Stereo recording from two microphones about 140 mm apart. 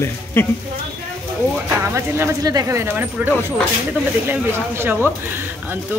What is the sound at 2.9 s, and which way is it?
Speech, 15° right (ahead or behind).